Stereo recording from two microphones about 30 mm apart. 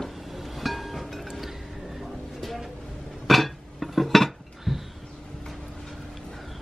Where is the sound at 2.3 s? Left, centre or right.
Centre.